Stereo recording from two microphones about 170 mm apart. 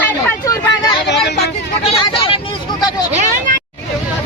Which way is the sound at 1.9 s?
35° left (ahead or behind).